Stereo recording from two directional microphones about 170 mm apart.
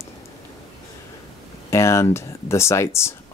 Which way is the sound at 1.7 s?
15° left (ahead or behind).